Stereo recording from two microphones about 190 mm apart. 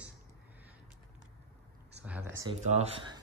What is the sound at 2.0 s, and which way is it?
Speech, 10° right (ahead or behind).